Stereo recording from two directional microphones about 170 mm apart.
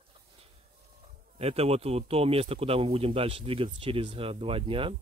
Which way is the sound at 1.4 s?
35° right (ahead or behind).